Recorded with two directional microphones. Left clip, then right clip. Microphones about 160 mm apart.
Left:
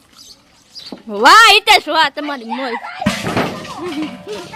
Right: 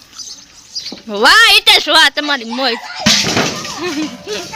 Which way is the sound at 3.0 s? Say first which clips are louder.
Right 7 dB; 60° right (ahead or behind).